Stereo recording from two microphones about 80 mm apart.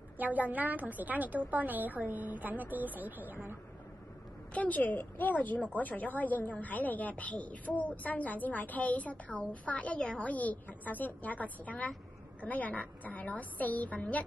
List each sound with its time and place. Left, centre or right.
0.2 s a woman's voice: right
4.6 s a woman's voice: left